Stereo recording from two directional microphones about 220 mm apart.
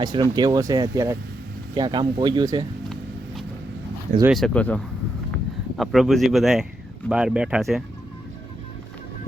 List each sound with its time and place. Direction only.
0.0 s speech: 20° right (ahead or behind)
4.3 s speech: centre (ahead or behind)